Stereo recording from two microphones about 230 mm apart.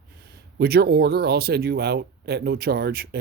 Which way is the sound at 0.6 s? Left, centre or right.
Right.